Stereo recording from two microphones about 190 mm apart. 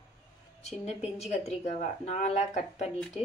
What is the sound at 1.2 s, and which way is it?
Speech, 35° left (ahead or behind).